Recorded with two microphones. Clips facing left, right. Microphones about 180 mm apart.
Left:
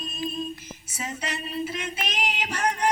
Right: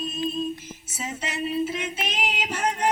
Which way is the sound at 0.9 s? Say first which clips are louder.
Right 2 dB; 5° right (ahead or behind).